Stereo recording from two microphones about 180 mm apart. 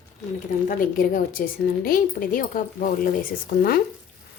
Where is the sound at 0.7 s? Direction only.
50° left (ahead or behind).